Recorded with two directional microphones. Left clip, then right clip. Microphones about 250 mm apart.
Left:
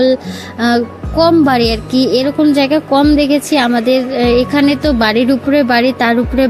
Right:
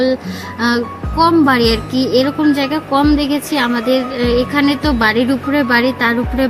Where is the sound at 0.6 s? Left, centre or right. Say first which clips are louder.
Left 3 dB; centre.